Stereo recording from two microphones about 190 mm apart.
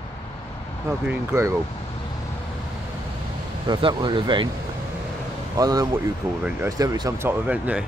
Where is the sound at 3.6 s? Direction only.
25° right (ahead or behind).